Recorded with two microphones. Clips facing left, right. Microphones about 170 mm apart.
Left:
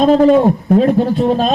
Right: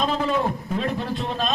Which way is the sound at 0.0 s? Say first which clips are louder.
Left 14 dB; 40° left (ahead or behind).